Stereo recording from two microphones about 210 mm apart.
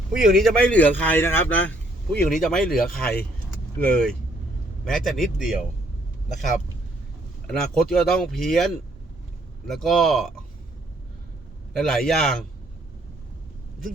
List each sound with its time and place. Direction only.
0.1 s speech: centre (ahead or behind)
7.4 s speech: 5° left (ahead or behind)
11.8 s speech: centre (ahead or behind)